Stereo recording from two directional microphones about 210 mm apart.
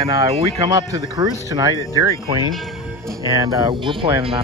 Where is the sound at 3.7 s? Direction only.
25° right (ahead or behind).